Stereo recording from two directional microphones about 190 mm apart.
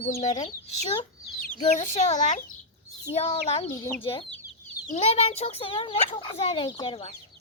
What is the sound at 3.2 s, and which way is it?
Speech, 30° left (ahead or behind).